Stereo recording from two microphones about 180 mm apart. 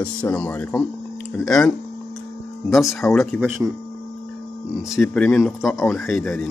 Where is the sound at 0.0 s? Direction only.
5° left (ahead or behind).